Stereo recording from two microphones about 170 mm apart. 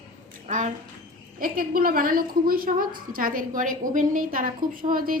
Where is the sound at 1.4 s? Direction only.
55° right (ahead or behind).